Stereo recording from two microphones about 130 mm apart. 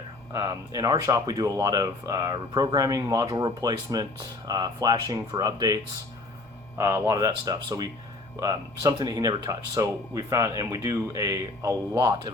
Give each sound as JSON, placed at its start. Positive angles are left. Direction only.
{"t": 0.3, "sound": "speech", "side_deg": -25}